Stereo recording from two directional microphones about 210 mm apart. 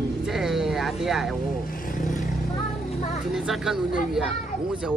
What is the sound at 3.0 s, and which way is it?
Speech, 35° left (ahead or behind).